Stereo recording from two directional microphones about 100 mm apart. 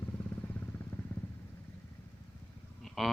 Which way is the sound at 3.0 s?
Centre (ahead or behind).